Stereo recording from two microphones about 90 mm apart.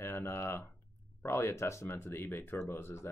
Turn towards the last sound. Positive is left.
turn(degrees=25)  # may be behind; listen again after turning